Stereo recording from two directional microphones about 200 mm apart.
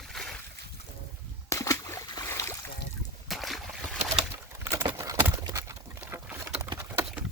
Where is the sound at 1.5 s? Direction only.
15° left (ahead or behind).